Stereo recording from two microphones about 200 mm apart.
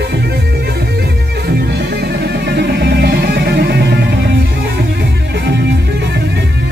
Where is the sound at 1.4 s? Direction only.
55° right (ahead or behind).